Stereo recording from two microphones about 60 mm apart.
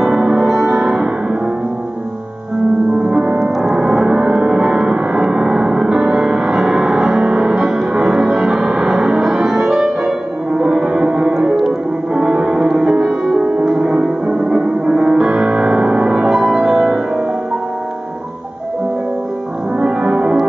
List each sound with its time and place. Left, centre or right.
0.0 s music: centre
3.0 s music: centre
3.6 s gong: centre
19.8 s music: centre